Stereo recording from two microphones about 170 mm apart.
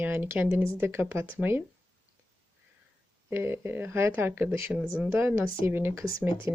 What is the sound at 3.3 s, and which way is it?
Speech, 15° right (ahead or behind).